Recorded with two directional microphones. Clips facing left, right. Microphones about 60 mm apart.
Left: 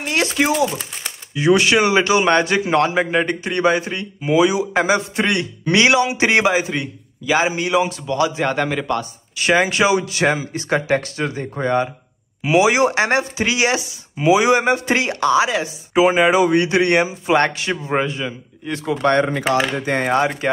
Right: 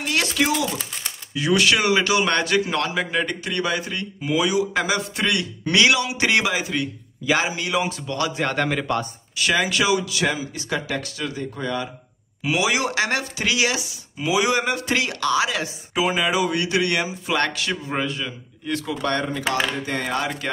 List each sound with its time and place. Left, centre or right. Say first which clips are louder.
0.0 s a sound: left 3 dB; left
0.5 s speech: left 5 dB; centre
1.3 s speech: left 5 dB; left
7.7 s speech: left 6 dB; centre
9.4 s speech: left 5 dB; left
12.4 s speech: left 7 dB; left
16.2 s speech: left 7 dB; left
19.2 s speech: left 5 dB; left
19.9 s speech: left 7 dB; left